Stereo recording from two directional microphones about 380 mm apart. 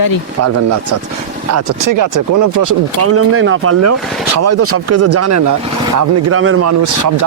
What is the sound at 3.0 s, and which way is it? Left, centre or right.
Speech, right.